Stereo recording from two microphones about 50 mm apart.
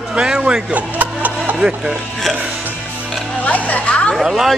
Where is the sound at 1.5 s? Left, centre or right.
Centre.